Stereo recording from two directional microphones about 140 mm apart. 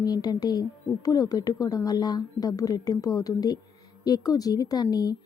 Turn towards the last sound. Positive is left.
turn(degrees=25)  # may be behind; listen again after turning